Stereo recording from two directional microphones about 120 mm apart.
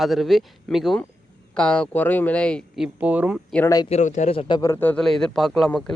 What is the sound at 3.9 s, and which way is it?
Speech, 85° left.